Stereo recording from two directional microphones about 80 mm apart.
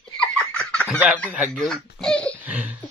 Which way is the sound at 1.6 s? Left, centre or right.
Centre.